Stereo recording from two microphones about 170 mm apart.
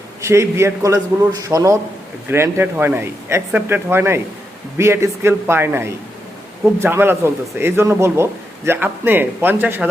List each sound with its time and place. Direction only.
0.2 s a man's voice: 15° right (ahead or behind)